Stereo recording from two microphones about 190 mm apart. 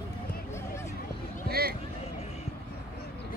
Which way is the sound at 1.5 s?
55° right (ahead or behind).